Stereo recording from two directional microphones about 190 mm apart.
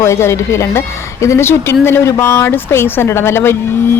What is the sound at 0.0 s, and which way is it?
A woman's voice, 15° left (ahead or behind).